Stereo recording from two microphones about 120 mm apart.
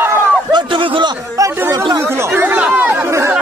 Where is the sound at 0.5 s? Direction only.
45° right (ahead or behind).